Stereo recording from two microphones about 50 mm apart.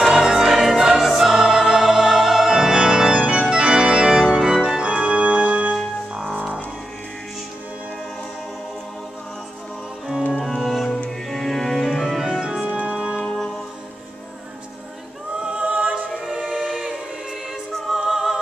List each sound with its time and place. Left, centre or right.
0.1 s music: centre; by 5.7 s right
10.3 s organ: centre
11.1 s music: centre
12.4 s organ: centre
12.7 s music: right
15.3 s a capella: right
16.3 s choir: centre
17.9 s music: centre